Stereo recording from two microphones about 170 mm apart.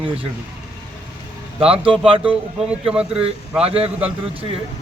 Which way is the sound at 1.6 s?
35° right (ahead or behind).